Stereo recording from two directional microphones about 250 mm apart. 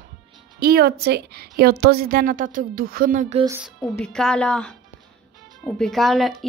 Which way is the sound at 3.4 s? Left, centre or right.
Centre.